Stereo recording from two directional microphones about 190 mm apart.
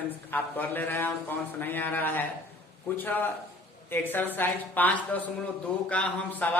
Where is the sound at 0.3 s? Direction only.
10° left (ahead or behind).